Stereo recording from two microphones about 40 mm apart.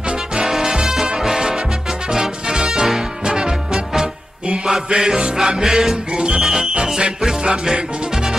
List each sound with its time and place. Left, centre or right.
0.4 s music: centre